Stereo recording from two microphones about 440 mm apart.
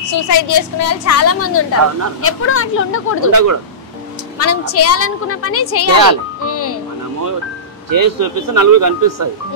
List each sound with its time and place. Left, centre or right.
0.1 s a woman's voice: left
3.3 s speech: right
4.4 s a woman's voice: left
6.4 s music: left
7.9 s speech: right